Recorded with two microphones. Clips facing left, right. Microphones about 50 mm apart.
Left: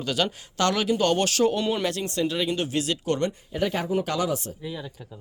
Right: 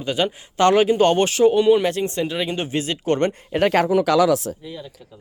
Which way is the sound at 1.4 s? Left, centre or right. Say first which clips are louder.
Right 8 dB; centre.